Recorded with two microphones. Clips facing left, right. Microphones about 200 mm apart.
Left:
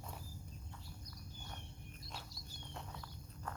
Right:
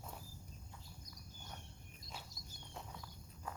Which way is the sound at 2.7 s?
5° right (ahead or behind).